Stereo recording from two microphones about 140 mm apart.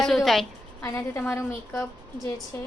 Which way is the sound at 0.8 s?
20° left (ahead or behind).